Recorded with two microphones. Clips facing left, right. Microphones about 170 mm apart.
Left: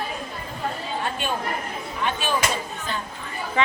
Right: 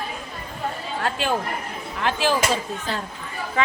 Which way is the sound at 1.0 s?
90° right.